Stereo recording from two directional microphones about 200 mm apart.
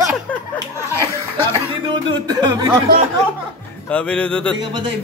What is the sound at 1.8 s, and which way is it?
Speech, 25° right (ahead or behind).